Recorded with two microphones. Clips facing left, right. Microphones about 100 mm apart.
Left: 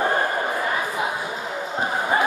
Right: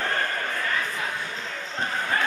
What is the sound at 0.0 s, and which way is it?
Basketball bounce, 20° left (ahead or behind).